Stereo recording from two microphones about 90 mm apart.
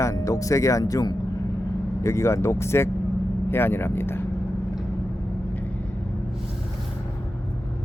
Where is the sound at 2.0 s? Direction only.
30° left (ahead or behind).